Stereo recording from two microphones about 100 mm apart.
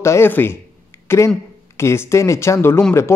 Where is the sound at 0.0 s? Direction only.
25° left (ahead or behind).